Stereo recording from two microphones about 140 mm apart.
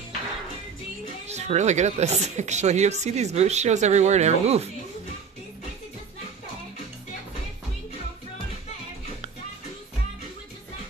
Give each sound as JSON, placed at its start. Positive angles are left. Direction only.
{"t": 1.2, "sound": "speech", "side_deg": -50}